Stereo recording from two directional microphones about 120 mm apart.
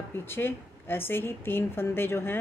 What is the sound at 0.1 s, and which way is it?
A woman's voice, 20° left (ahead or behind).